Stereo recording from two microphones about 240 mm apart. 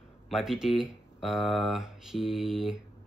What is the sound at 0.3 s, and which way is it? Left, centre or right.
Speech, centre.